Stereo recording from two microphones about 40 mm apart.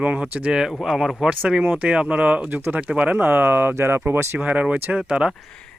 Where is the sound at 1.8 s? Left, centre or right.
Right.